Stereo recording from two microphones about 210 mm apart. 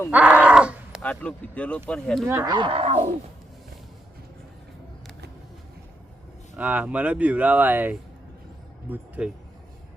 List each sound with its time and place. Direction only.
0.1 s speech: 5° right (ahead or behind)
1.0 s speech: 5° left (ahead or behind)
2.2 s speech: 15° right (ahead or behind)
6.6 s speech: 5° right (ahead or behind)